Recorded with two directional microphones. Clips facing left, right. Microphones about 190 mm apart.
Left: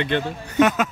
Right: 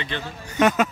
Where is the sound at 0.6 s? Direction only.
Centre (ahead or behind).